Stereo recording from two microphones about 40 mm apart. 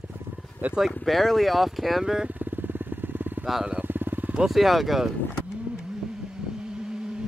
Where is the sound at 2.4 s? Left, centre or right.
Right.